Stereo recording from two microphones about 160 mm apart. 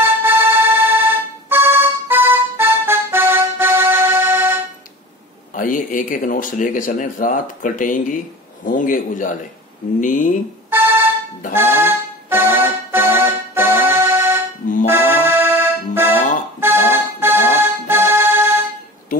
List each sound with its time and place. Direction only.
0.0 s music: 15° right (ahead or behind)
5.5 s speech: 55° left (ahead or behind)
10.7 s music: 15° right (ahead or behind)
14.9 s accordion: 15° right (ahead or behind)